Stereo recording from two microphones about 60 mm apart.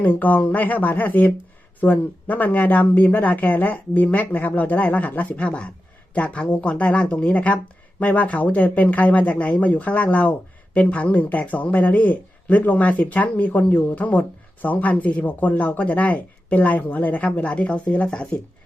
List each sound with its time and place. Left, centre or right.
0.0 s speech: left